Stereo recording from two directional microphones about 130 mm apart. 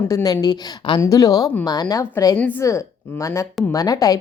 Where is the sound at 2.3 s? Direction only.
15° left (ahead or behind).